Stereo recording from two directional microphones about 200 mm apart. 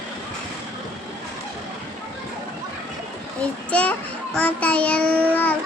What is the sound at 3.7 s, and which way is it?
A child's voice, 5° left (ahead or behind).